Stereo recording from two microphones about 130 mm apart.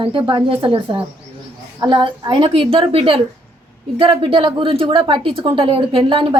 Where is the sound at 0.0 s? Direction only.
40° right (ahead or behind).